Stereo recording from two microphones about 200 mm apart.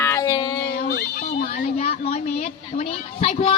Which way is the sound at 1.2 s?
40° left (ahead or behind).